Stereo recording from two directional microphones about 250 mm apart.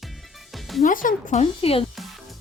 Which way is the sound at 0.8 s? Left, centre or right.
Left.